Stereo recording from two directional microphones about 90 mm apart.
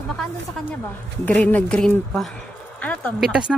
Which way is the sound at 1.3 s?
15° left (ahead or behind).